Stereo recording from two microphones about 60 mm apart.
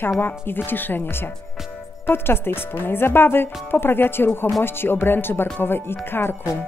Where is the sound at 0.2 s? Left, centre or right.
Left.